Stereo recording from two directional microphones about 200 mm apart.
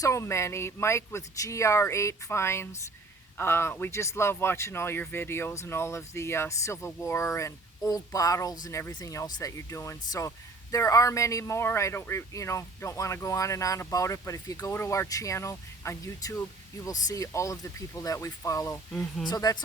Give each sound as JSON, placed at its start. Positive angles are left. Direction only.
{"t": 0.0, "sound": "a woman's voice", "side_deg": 15}